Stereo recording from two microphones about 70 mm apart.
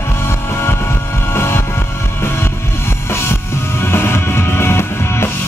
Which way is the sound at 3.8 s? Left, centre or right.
Left.